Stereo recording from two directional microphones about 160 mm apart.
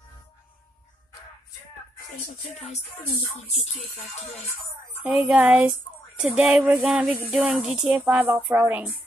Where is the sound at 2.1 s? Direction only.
45° left (ahead or behind).